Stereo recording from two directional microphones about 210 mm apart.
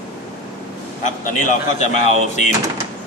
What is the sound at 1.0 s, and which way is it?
A man's voice, 35° left (ahead or behind).